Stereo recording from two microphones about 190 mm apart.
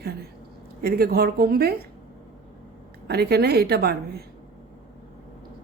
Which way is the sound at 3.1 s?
55° right (ahead or behind).